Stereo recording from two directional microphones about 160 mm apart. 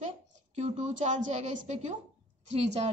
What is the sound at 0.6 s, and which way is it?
A woman's voice, 45° right (ahead or behind).